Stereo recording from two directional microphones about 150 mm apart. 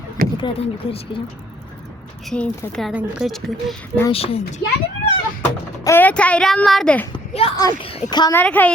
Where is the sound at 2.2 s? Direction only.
5° left (ahead or behind).